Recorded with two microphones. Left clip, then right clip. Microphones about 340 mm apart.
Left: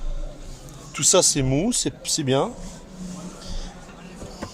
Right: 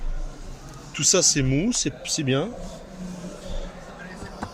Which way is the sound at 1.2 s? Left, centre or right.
Left.